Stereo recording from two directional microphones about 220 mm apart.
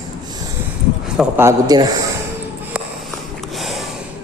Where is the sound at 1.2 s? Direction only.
10° right (ahead or behind).